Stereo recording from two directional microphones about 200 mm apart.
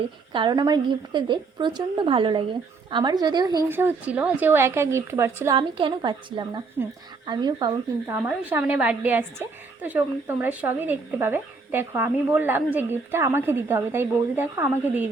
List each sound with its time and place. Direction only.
0.3 s a woman's voice: 20° right (ahead or behind)